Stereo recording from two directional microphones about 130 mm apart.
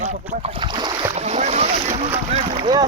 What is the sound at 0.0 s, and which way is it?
Speech, 65° right (ahead or behind).